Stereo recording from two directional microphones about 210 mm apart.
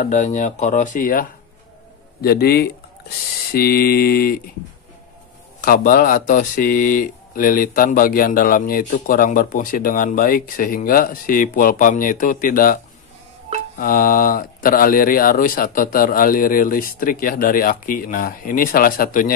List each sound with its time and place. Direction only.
0.0 s speech: 35° left (ahead or behind)
5.6 s speech: 40° left (ahead or behind)
13.7 s speech: 40° left (ahead or behind)